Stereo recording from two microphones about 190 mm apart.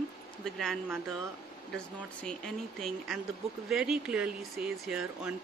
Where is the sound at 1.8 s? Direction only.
5° left (ahead or behind).